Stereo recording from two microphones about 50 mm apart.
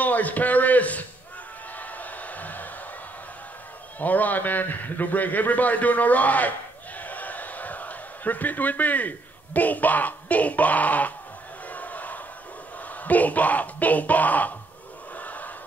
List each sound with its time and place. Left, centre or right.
0.0 s a man's voice: left
1.8 s a sound: left
4.0 s a man's voice: left
7.0 s a sound: left
11.7 s crowd: left
13.0 s a man's voice: left
15.1 s battle cry: left